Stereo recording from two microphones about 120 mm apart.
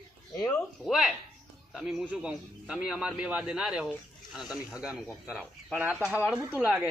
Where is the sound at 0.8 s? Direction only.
5° right (ahead or behind).